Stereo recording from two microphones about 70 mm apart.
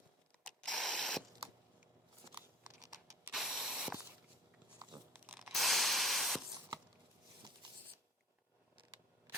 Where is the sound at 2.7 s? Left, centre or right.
Right.